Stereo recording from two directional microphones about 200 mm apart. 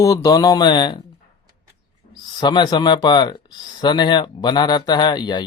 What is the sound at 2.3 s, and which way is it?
Speech, 20° left (ahead or behind).